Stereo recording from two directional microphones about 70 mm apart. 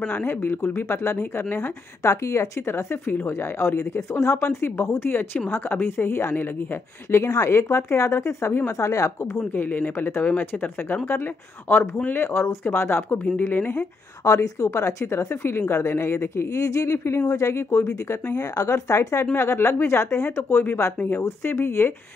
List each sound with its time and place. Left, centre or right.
0.1 s a woman's voice: left
9.5 s speech: left
12.3 s a woman's voice: left
13.7 s a woman's voice: left
19.3 s a woman's voice: left